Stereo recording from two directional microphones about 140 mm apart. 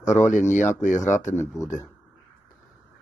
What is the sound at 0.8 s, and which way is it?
Speech, 65° left (ahead or behind).